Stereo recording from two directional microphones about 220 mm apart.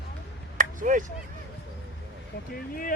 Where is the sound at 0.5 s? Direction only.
35° right (ahead or behind).